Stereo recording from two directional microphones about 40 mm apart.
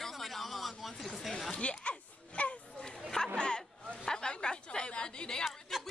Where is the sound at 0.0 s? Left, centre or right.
Centre.